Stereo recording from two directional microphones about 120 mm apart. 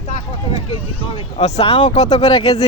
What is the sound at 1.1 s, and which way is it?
Speech, 55° left (ahead or behind).